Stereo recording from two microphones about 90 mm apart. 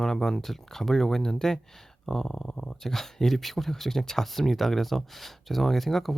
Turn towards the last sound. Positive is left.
turn(degrees=0)  # may be behind; listen again after turning